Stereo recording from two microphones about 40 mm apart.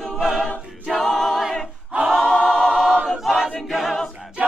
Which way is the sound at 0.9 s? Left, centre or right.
Centre.